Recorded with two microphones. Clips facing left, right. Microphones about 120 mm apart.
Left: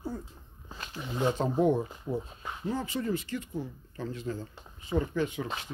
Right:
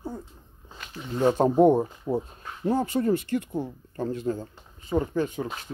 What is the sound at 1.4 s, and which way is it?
Speech, 45° right (ahead or behind).